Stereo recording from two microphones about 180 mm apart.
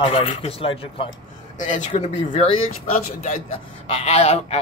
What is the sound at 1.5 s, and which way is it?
Speech, 45° left (ahead or behind).